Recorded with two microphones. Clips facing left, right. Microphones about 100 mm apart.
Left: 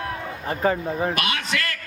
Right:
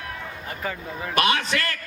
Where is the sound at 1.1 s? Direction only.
35° right (ahead or behind).